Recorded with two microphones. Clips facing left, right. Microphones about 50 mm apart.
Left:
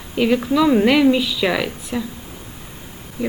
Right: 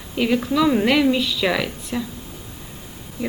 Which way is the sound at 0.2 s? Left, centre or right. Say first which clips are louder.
Left 2 dB; centre.